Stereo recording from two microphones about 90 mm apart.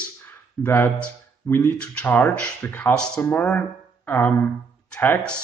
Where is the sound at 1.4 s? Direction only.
25° left (ahead or behind).